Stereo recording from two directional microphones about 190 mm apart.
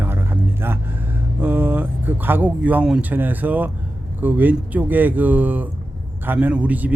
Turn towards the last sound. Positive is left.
turn(degrees=-10)  # may be behind; listen again after turning